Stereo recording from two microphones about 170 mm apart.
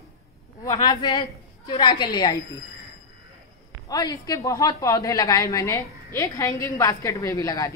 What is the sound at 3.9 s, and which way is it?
Speech, 20° left (ahead or behind).